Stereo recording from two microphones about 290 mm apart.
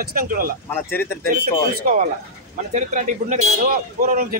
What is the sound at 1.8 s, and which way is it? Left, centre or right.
Speech, right.